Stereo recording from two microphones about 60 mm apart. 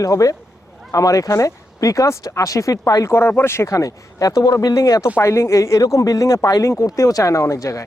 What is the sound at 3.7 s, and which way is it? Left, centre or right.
A man's voice, left.